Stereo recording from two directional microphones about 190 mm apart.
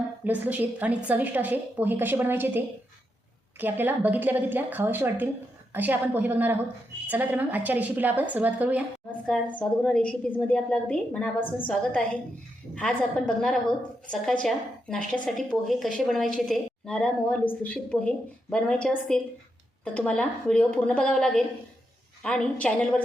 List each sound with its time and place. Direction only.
0.3 s a woman's voice: 10° right (ahead or behind)
9.2 s a woman's voice: 5° left (ahead or behind)
12.7 s a woman's voice: 5° left (ahead or behind)